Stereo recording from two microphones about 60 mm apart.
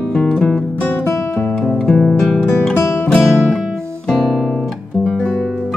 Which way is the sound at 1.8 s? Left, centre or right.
Centre.